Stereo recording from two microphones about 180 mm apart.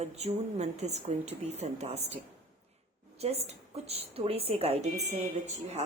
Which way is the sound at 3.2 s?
35° right (ahead or behind).